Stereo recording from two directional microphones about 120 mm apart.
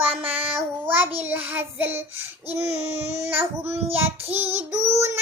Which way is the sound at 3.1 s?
20° right (ahead or behind).